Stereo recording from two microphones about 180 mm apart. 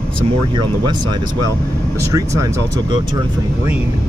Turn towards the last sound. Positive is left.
turn(degrees=-20)  # may be behind; listen again after turning